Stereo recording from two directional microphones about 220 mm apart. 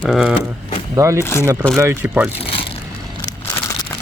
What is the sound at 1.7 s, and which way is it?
Speech, 10° right (ahead or behind).